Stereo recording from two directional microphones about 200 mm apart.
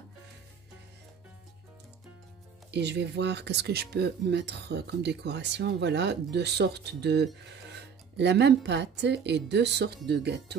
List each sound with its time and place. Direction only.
2.7 s speech: 55° right (ahead or behind)